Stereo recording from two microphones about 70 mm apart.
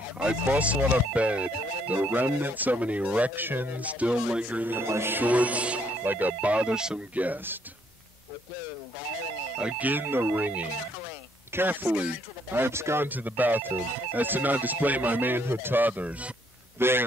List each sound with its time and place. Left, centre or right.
0.2 s speech: centre
4.7 s speech: right; by 7.0 s centre
7.2 s speech: right
9.6 s speech: centre
9.8 s speech: right
12.5 s speech: right; by 16.3 s centre
16.7 s speech: right